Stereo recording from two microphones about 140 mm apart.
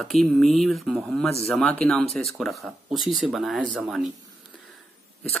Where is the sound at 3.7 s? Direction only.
5° right (ahead or behind).